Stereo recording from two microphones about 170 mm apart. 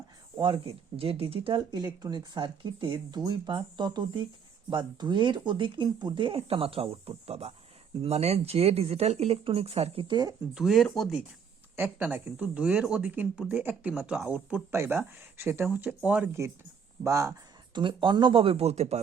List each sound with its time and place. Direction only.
0.3 s speech: 30° right (ahead or behind)
10.5 s speech: centre (ahead or behind)
11.8 s speech: 10° right (ahead or behind)
17.7 s speech: 25° right (ahead or behind)